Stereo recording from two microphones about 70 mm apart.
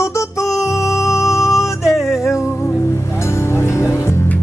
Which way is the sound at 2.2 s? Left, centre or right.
Left.